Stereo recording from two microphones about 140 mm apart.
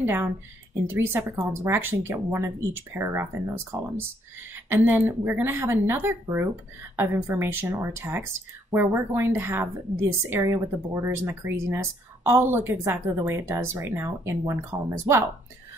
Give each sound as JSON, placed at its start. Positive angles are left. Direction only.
{"t": 0.0, "sound": "a woman's voice", "side_deg": -15}